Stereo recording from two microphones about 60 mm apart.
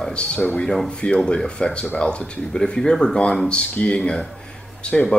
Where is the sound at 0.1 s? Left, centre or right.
Centre.